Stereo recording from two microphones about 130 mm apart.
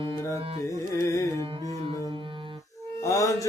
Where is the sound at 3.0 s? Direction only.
25° left (ahead or behind).